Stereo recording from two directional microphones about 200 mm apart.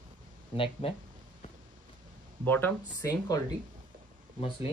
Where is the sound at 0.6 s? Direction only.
25° left (ahead or behind).